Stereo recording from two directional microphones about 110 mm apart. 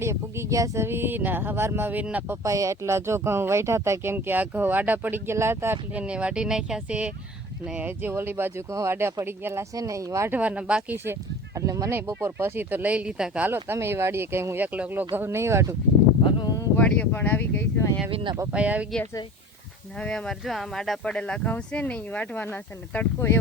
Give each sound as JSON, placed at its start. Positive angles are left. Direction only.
{"t": 0.0, "sound": "speech", "side_deg": -25}
{"t": 2.4, "sound": "speech", "side_deg": -30}
{"t": 10.3, "sound": "speech", "side_deg": -10}
{"t": 10.9, "sound": "speech", "side_deg": -20}
{"t": 16.4, "sound": "a sound", "side_deg": 35}
{"t": 16.7, "sound": "speech", "side_deg": 15}
{"t": 18.1, "sound": "speech", "side_deg": -55}
{"t": 18.5, "sound": "speech", "side_deg": -10}
{"t": 20.0, "sound": "speech", "side_deg": 10}